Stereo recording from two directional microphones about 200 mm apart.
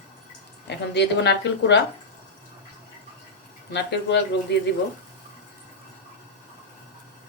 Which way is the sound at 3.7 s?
60° left (ahead or behind).